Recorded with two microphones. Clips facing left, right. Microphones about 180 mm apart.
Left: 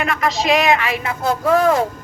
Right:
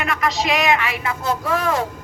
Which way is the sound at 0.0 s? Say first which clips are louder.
Left 2 dB; 30° left (ahead or behind).